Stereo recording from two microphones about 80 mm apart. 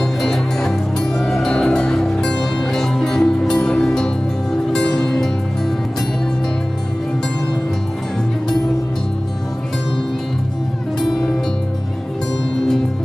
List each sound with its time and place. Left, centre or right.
0.0 s music: centre